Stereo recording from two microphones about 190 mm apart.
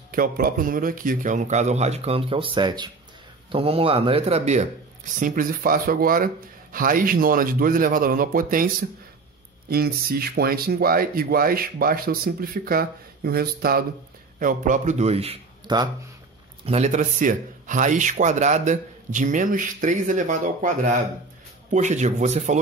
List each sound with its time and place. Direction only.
0.1 s speech: 50° right (ahead or behind)
5.2 s speech: 45° right (ahead or behind)
9.7 s speech: 55° right (ahead or behind); by 15.9 s 20° right (ahead or behind)
16.6 s speech: 35° right (ahead or behind)